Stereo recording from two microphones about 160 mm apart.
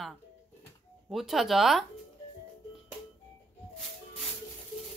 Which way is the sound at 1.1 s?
Centre (ahead or behind).